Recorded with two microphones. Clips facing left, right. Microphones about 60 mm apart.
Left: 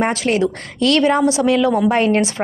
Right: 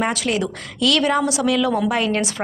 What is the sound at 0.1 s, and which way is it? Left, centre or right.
A woman's voice, left.